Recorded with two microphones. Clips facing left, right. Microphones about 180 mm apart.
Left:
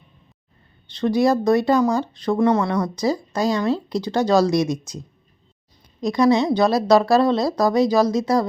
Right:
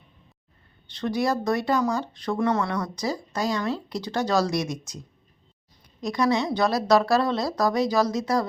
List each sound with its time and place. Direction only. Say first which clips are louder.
0.9 s speech: left 7 dB; 25° left (ahead or behind)
6.0 s speech: left 6 dB; 25° left (ahead or behind)